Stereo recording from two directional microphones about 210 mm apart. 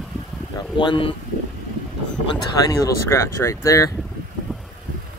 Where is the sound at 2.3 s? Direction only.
15° left (ahead or behind).